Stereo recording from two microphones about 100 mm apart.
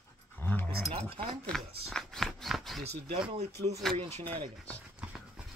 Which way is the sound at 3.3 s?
90° right.